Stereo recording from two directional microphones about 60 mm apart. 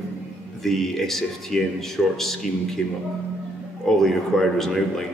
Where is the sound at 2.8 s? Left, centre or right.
Left.